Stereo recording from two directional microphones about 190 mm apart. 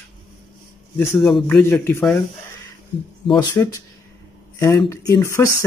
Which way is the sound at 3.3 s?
20° left (ahead or behind).